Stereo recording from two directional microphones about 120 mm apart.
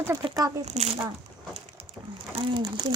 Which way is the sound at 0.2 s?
30° right (ahead or behind).